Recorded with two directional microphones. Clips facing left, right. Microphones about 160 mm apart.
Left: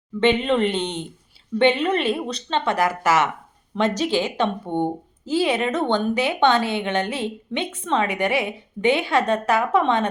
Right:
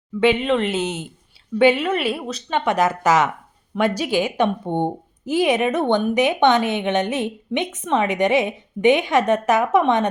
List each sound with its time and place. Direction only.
0.2 s a woman's voice: 5° right (ahead or behind)